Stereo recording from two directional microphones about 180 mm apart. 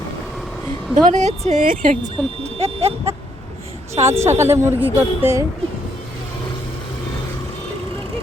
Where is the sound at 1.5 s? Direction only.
45° right (ahead or behind).